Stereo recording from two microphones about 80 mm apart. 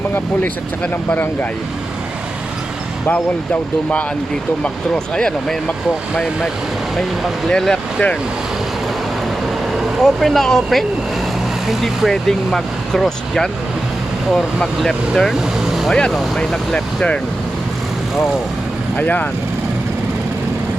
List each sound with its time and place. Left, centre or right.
1.1 s speech: left
3.1 s speech: centre
5.1 s speech: centre
7.4 s speech: centre
10.0 s speech: centre
18.9 s speech: centre